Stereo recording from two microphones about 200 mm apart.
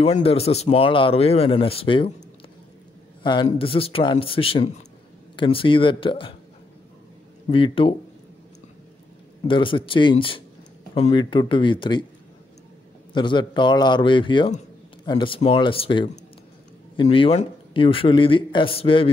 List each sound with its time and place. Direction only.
0.0 s speech: 30° left (ahead or behind)
3.4 s speech: 25° left (ahead or behind)
7.5 s speech: 25° left (ahead or behind)
9.5 s speech: 25° left (ahead or behind)
13.1 s speech: 25° left (ahead or behind)